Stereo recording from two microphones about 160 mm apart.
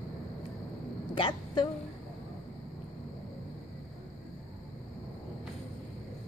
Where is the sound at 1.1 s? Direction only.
30° left (ahead or behind).